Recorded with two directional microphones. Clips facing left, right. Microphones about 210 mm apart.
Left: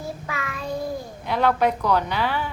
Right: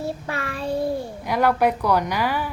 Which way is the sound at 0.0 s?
30° right (ahead or behind).